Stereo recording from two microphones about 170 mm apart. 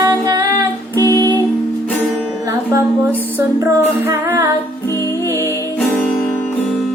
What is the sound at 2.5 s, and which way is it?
Music, 15° right (ahead or behind).